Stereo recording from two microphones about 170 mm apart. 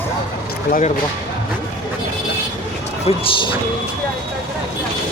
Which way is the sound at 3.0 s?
30° left (ahead or behind).